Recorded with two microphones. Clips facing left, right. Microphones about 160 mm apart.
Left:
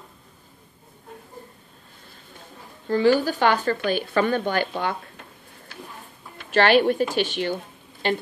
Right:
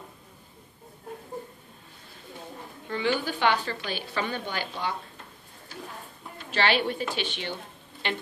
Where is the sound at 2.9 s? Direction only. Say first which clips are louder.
Left 9 dB; 40° left (ahead or behind).